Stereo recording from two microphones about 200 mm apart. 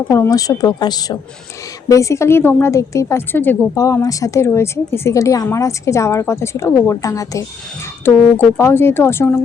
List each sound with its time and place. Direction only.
0.1 s a woman's voice: 15° left (ahead or behind)